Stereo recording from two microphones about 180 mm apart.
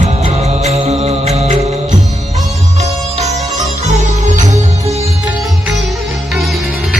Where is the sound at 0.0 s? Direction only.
40° right (ahead or behind).